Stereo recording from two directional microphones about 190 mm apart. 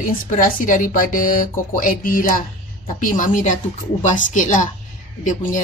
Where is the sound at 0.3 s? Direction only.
45° left (ahead or behind).